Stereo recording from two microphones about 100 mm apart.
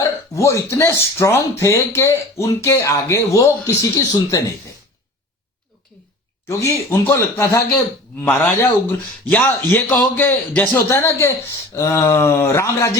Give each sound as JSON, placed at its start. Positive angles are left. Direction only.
{"t": 0.3, "sound": "speech", "side_deg": 30}
{"t": 6.5, "sound": "a man's voice", "side_deg": 30}
{"t": 10.8, "sound": "speech", "side_deg": 25}